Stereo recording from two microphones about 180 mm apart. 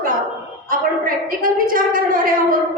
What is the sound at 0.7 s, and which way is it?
A woman's voice, 50° right (ahead or behind).